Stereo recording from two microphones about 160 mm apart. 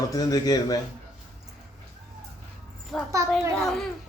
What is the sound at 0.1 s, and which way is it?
Speech, 25° left (ahead or behind).